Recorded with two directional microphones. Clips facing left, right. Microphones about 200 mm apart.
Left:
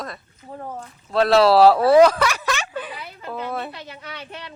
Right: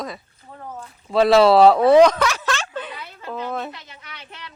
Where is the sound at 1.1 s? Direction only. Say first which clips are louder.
Right 2 dB; centre (ahead or behind).